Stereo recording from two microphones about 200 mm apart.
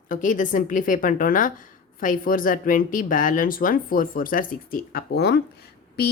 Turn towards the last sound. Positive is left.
turn(degrees=55)  # may be behind; listen again after turning